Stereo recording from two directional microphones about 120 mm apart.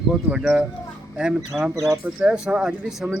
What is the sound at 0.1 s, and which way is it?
Speech, 5° right (ahead or behind).